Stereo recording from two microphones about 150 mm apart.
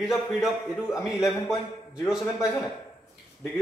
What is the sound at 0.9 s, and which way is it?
Speech, 20° left (ahead or behind).